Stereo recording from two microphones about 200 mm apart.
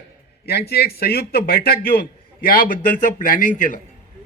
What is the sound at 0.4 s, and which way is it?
A man's voice, 55° left (ahead or behind).